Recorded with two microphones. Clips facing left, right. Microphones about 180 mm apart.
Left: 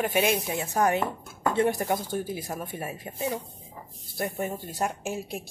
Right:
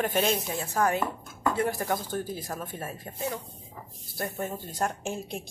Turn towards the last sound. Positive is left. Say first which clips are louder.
# left 1 dB
turn(degrees=5)  # may be behind; listen again after turning